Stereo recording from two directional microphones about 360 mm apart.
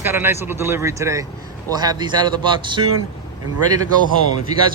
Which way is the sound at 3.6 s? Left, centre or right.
Right.